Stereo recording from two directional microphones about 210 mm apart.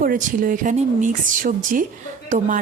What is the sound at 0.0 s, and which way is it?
Speech, 40° right (ahead or behind).